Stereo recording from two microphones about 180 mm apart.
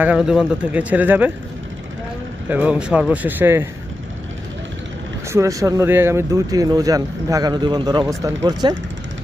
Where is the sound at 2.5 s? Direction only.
10° right (ahead or behind).